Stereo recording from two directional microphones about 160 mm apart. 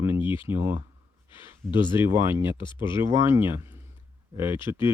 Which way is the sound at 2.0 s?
15° right (ahead or behind).